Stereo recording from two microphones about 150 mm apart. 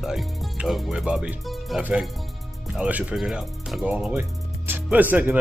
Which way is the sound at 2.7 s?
10° right (ahead or behind).